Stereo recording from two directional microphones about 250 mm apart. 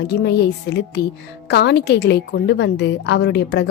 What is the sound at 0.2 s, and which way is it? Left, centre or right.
A woman's voice, left.